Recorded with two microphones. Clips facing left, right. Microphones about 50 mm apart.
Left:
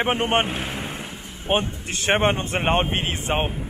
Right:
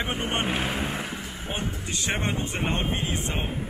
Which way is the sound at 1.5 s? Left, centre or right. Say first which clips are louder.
Left 9 dB; left.